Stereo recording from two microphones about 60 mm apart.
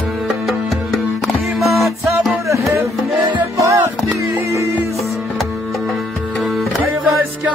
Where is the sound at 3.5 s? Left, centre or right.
Right.